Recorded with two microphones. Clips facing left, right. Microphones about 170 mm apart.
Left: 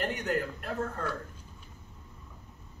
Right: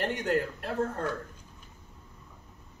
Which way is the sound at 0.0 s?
35° right (ahead or behind).